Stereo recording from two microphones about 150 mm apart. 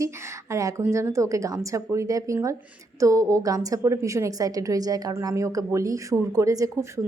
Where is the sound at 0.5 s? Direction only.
20° right (ahead or behind).